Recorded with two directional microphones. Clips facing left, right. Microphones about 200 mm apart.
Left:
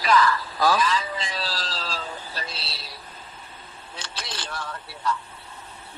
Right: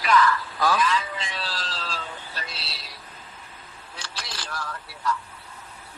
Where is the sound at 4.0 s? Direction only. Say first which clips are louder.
Left 2 dB; 25° left (ahead or behind).